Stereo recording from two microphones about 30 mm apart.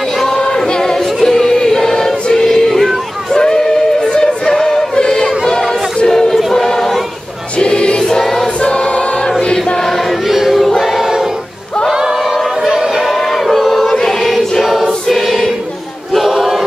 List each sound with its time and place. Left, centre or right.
0.6 s music: centre
2.4 s a sound: centre
3.3 s music: left
4.9 s music: left
6.0 s choir: centre
7.5 s choir: left
10.2 s choir: centre
10.6 s choir: centre
12.6 s a sound: centre
12.9 s crowd: centre
13.8 s choir: centre
14.6 s choir: centre
15.0 s choir: centre